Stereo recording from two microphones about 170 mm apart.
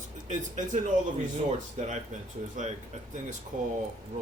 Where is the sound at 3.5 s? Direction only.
50° right (ahead or behind).